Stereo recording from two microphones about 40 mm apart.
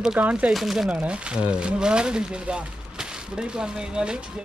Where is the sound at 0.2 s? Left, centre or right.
Right.